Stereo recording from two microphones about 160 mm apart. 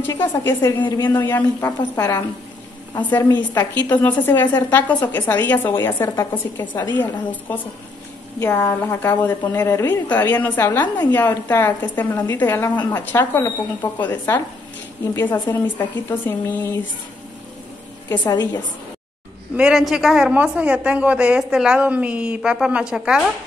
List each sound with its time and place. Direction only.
0.5 s a woman's voice: 15° left (ahead or behind)
0.8 s a woman's voice: 30° left (ahead or behind)
1.1 s a woman's voice: 15° left (ahead or behind)
18.2 s a woman's voice: 25° left (ahead or behind)
19.5 s a woman's voice: 5° right (ahead or behind)